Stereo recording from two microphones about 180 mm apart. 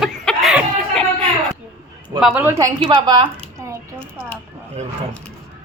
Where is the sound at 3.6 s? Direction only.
15° right (ahead or behind).